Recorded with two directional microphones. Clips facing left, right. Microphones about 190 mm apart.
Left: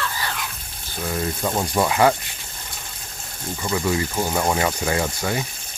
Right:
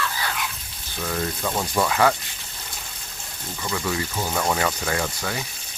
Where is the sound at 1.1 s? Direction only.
20° left (ahead or behind).